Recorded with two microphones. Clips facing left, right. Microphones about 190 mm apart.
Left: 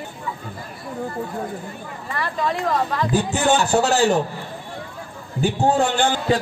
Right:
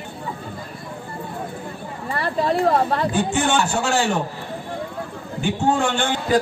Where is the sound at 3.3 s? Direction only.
40° left (ahead or behind).